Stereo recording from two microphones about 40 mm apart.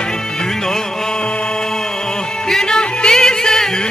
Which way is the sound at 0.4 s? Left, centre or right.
Centre.